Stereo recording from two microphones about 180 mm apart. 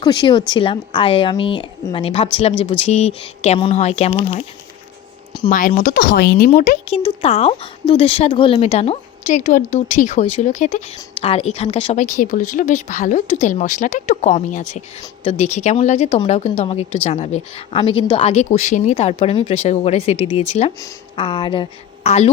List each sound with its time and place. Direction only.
0.0 s speech: 25° left (ahead or behind)
5.5 s speech: 45° left (ahead or behind)
6.9 s speech: 30° left (ahead or behind)
22.0 s a woman's voice: 35° left (ahead or behind)